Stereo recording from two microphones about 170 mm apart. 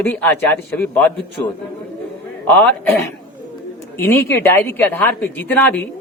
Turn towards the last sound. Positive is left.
turn(degrees=10)  # may be behind; listen again after turning